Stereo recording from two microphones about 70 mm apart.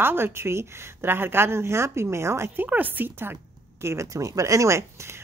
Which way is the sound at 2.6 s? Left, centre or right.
Right.